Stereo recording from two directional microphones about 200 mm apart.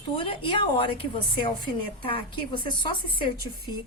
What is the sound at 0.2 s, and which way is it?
A woman's voice, 25° left (ahead or behind).